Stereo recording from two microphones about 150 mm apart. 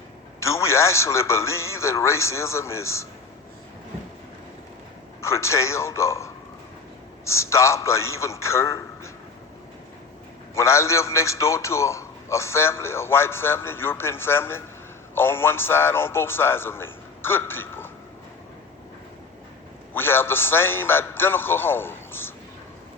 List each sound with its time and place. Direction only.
0.3 s a man's voice: 20° left (ahead or behind)
5.2 s a man's voice: 20° left (ahead or behind)
10.5 s a man's voice: 20° left (ahead or behind)
19.9 s a man's voice: 15° left (ahead or behind)